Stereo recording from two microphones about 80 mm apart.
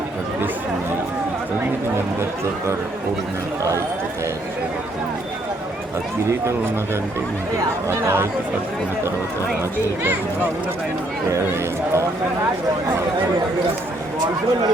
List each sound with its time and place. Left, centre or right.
7.9 s speech: right